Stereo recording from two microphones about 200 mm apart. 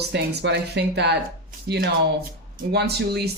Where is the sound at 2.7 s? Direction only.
55° right (ahead or behind).